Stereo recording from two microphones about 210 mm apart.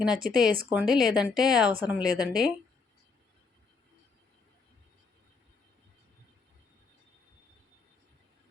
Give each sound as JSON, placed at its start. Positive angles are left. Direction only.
{"t": 0.2, "sound": "speech", "side_deg": -45}
{"t": 0.7, "sound": "speech", "side_deg": -5}